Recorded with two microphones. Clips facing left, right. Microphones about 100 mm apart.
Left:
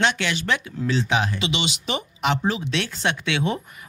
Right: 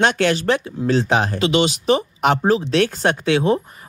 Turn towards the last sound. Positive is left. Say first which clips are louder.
# right 8 dB
turn(degrees=-35)  # may be behind; listen again after turning